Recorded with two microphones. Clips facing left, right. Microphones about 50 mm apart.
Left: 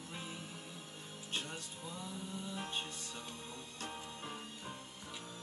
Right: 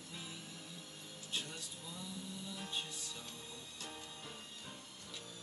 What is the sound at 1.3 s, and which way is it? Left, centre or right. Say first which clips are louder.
Music: left 2 dB; left.